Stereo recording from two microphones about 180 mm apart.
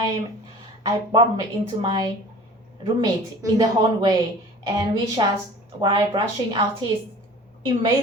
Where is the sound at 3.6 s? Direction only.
20° right (ahead or behind).